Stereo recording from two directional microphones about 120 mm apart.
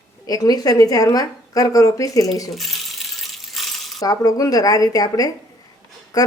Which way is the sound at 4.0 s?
30° left (ahead or behind).